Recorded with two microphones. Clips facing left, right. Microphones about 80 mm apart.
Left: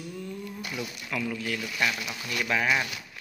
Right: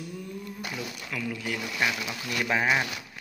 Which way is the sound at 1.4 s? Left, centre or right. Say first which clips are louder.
Even; centre.